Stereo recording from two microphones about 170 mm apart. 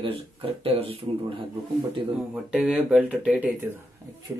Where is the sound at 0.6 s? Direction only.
30° right (ahead or behind).